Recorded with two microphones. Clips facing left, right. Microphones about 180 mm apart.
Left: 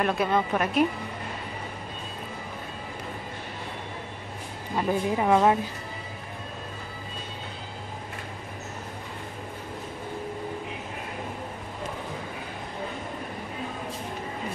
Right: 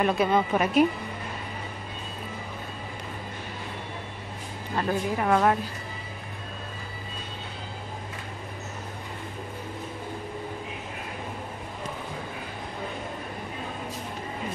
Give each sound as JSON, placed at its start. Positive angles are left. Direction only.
{"t": 0.0, "sound": "a woman's voice", "side_deg": 0}
{"t": 4.7, "sound": "a woman's voice", "side_deg": 15}